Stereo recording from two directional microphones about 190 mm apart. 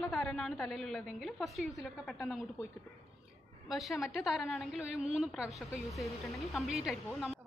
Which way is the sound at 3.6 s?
Centre (ahead or behind).